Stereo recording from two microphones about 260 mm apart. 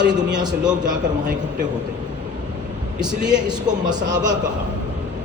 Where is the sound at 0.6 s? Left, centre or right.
Centre.